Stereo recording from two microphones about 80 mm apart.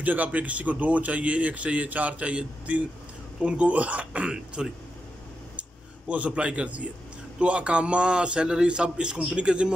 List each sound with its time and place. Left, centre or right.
0.0 s speech: centre